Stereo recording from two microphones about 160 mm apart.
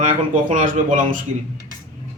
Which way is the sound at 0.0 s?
55° right (ahead or behind).